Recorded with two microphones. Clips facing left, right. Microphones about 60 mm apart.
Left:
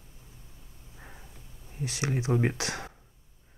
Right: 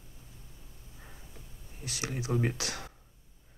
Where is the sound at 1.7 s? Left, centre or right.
Left.